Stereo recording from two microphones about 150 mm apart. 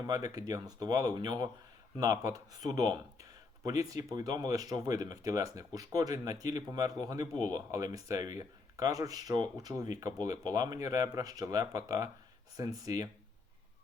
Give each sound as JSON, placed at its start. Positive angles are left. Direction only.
{"t": 0.1, "sound": "speech", "side_deg": -25}